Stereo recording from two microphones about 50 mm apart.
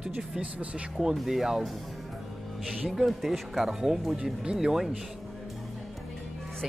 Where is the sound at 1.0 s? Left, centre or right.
Centre.